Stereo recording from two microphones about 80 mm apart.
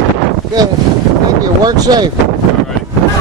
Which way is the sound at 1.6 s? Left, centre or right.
Right.